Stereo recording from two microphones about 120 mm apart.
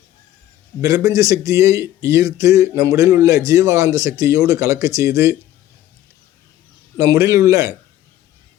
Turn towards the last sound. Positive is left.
turn(degrees=-25)  # may be behind; listen again after turning